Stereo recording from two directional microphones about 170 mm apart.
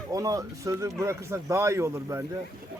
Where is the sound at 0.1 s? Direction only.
20° right (ahead or behind).